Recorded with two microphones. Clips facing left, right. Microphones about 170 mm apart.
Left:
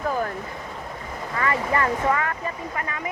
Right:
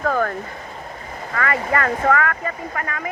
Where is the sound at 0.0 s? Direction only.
65° right (ahead or behind).